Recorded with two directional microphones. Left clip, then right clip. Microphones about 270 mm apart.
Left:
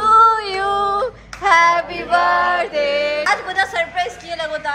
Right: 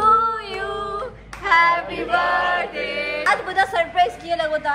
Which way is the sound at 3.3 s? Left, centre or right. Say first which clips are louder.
Left 1 dB; centre.